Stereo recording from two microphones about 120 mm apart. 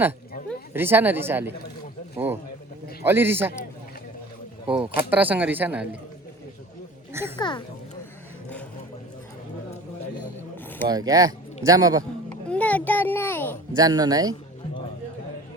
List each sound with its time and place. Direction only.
0.7 s speech: 15° right (ahead or behind)
3.0 s a man's voice: 20° right (ahead or behind)
4.6 s speech: 10° right (ahead or behind)
7.1 s speech: 20° right (ahead or behind)
7.3 s speech: 40° left (ahead or behind)
10.8 s speech: 30° right (ahead or behind)
12.5 s a sound: 10° left (ahead or behind)
13.7 s speech: 30° right (ahead or behind)